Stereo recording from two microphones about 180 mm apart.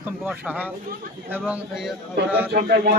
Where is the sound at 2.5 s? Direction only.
55° right (ahead or behind).